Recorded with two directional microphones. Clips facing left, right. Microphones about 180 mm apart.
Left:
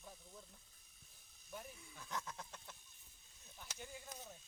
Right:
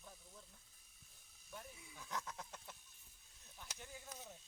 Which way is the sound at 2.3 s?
5° right (ahead or behind).